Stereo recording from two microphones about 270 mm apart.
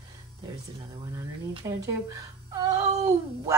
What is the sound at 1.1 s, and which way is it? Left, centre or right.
Speech, centre.